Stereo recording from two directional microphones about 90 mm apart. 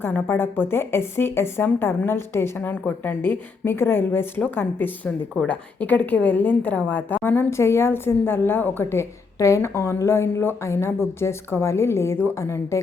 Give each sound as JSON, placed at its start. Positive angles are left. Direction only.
{"t": 0.0, "sound": "a woman's voice", "side_deg": 25}
{"t": 5.5, "sound": "a woman's voice", "side_deg": 15}